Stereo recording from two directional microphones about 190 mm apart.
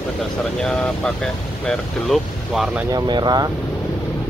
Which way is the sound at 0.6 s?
5° left (ahead or behind).